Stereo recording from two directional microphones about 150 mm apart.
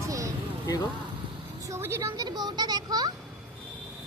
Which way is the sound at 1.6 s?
15° right (ahead or behind).